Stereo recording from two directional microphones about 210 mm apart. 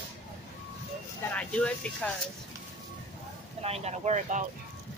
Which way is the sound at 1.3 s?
5° left (ahead or behind).